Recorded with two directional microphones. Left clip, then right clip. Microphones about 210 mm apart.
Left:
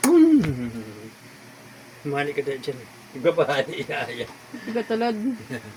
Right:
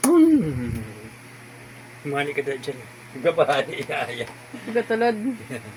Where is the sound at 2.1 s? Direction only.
5° left (ahead or behind).